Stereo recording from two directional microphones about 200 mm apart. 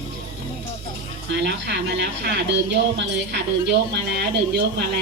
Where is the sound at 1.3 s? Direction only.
60° right (ahead or behind).